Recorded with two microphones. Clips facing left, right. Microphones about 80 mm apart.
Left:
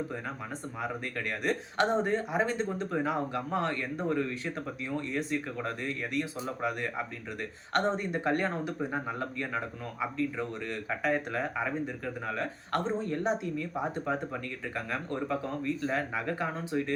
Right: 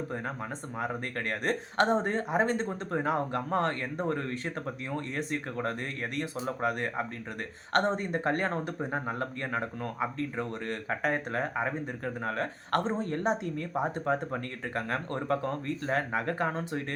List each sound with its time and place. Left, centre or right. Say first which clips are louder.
0.8 s speech: right 2 dB; right